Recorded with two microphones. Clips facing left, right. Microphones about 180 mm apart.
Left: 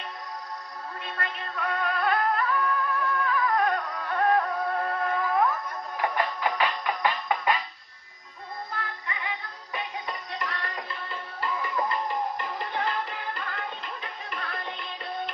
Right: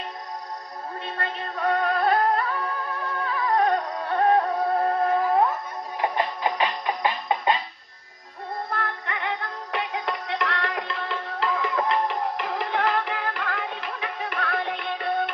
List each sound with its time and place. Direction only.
1.2 s music: 35° right (ahead or behind)
8.7 s synthetic singing: 65° right (ahead or behind)
9.7 s music: 90° right; by 15.2 s 70° right (ahead or behind)